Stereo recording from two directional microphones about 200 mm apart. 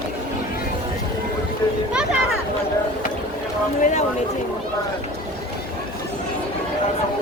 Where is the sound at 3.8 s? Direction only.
40° left (ahead or behind).